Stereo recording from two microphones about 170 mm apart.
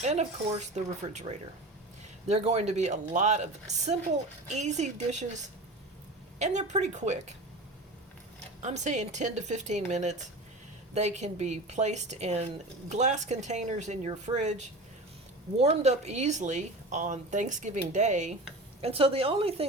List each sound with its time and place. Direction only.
0.0 s a woman's voice: 40° right (ahead or behind)
6.4 s speech: 45° right (ahead or behind)
8.6 s a woman's voice: 45° right (ahead or behind)
15.5 s a woman's voice: 40° right (ahead or behind)